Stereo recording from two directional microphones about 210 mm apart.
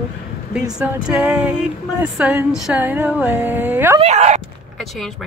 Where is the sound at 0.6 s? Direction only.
10° right (ahead or behind).